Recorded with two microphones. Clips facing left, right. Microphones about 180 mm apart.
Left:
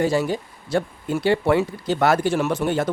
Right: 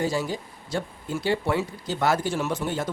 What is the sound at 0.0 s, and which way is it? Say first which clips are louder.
Speech: left 6 dB; 65° left (ahead or behind).